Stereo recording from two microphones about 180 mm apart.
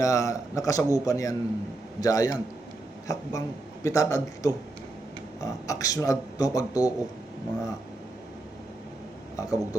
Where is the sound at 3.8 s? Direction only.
15° left (ahead or behind).